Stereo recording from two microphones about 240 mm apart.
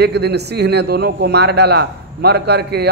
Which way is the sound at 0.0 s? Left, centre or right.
Right.